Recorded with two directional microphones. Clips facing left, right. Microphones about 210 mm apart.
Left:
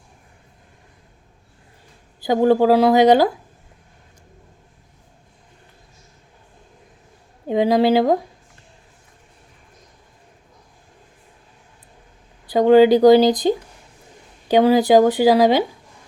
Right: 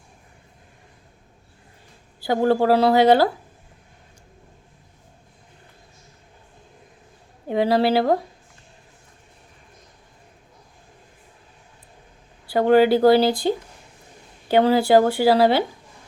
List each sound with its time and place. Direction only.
2.2 s speech: 15° left (ahead or behind)
7.4 s speech: 15° left (ahead or behind)
12.5 s speech: 15° left (ahead or behind)
14.4 s speech: 15° left (ahead or behind)